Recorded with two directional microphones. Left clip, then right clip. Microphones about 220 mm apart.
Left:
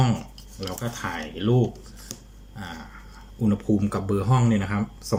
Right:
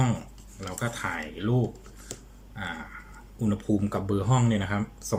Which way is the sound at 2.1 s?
5° left (ahead or behind).